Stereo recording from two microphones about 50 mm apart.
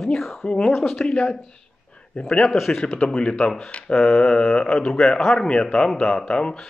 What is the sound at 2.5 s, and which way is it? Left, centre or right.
Speech, centre.